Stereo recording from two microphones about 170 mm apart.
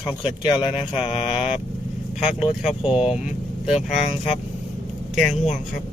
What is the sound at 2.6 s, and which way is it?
Speech, 5° right (ahead or behind).